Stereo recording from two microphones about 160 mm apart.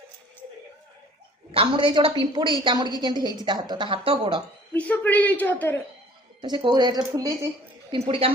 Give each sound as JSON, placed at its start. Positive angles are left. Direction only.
{"t": 1.5, "sound": "a woman's voice", "side_deg": -30}
{"t": 4.7, "sound": "a woman's voice", "side_deg": 10}
{"t": 6.4, "sound": "a woman's voice", "side_deg": -30}
{"t": 7.9, "sound": "a woman's voice", "side_deg": -35}